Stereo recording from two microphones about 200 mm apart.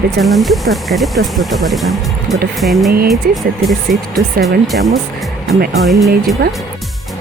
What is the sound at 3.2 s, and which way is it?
Speech, 50° right (ahead or behind).